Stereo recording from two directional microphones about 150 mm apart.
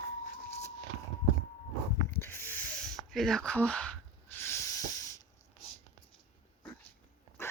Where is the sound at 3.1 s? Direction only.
Centre (ahead or behind); by 5.1 s 20° left (ahead or behind).